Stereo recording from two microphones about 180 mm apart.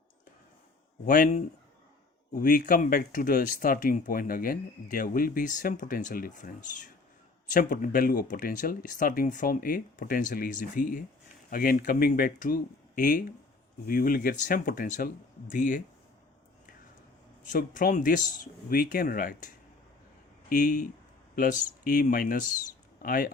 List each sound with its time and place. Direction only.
1.0 s speech: 50° left (ahead or behind)
17.4 s speech: 50° left (ahead or behind)
20.5 s speech: 45° left (ahead or behind)